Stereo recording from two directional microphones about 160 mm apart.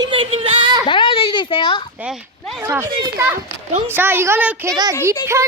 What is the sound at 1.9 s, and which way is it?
Speech, 5° right (ahead or behind).